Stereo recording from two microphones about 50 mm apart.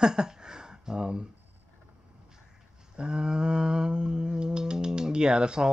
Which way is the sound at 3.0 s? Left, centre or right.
Centre.